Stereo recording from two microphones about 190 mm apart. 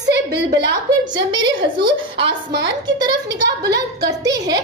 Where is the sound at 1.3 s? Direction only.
25° right (ahead or behind).